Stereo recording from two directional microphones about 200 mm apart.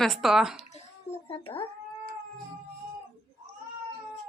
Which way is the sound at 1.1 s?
30° left (ahead or behind).